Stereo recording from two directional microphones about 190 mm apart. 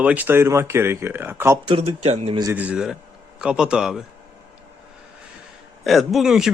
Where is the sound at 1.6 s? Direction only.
30° right (ahead or behind).